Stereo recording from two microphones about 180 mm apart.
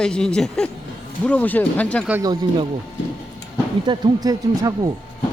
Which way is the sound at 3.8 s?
25° right (ahead or behind).